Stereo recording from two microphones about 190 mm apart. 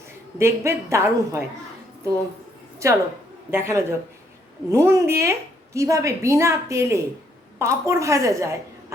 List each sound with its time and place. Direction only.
0.3 s a woman's voice: 15° right (ahead or behind)
2.8 s a woman's voice: 15° right (ahead or behind)